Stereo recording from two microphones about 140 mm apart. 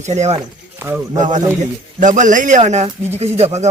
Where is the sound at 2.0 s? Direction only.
65° right (ahead or behind).